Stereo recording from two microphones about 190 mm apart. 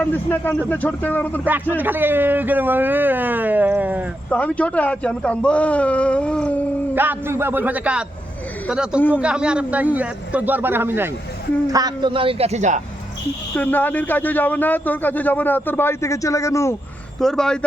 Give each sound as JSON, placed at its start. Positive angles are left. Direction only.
{"t": 0.0, "sound": "speech", "side_deg": 10}
{"t": 1.7, "sound": "speech", "side_deg": -10}
{"t": 4.3, "sound": "speech", "side_deg": 5}
{"t": 6.9, "sound": "a man's voice", "side_deg": -10}
{"t": 13.6, "sound": "speech", "side_deg": 10}
{"t": 17.2, "sound": "speech", "side_deg": 5}